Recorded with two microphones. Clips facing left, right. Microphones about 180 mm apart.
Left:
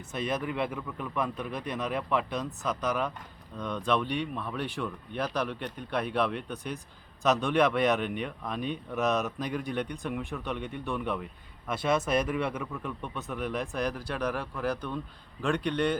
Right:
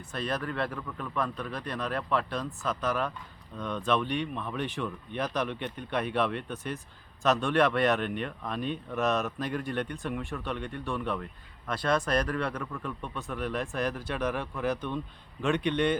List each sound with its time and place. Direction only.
0.3 s speech: 5° left (ahead or behind)
3.6 s speech: 15° left (ahead or behind); by 14.3 s 5° right (ahead or behind)
14.3 s speech: 5° left (ahead or behind)